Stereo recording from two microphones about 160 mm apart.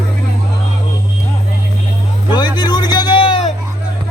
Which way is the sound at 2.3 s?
25° left (ahead or behind).